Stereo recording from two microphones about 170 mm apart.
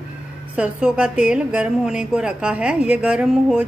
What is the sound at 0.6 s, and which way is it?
A woman's voice, 5° right (ahead or behind).